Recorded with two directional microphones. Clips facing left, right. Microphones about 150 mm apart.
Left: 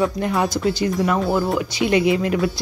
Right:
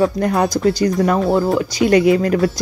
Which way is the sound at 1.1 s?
25° right (ahead or behind).